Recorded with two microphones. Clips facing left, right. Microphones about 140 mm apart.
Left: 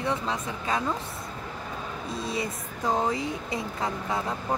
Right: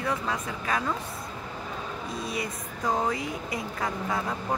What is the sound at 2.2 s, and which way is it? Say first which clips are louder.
Speech: left 3 dB; 30° left (ahead or behind).